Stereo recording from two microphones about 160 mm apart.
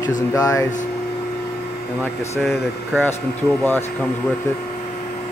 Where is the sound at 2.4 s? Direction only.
Centre (ahead or behind).